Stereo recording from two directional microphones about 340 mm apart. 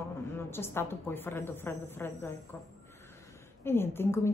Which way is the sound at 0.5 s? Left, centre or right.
Centre.